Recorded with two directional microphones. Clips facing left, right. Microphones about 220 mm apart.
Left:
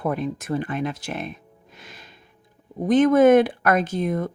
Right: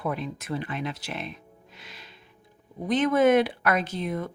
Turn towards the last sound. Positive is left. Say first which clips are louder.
# left 6 dB
turn(degrees=45)  # may be behind; listen again after turning